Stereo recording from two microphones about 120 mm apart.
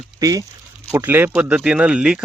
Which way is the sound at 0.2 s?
30° right (ahead or behind).